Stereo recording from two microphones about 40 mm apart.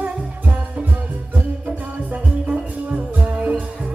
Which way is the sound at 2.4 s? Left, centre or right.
Right.